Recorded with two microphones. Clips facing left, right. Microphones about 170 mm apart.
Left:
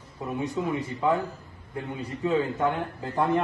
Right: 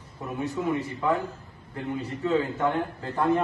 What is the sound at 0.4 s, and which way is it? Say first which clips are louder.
Speech: right 1 dB; 15° left (ahead or behind).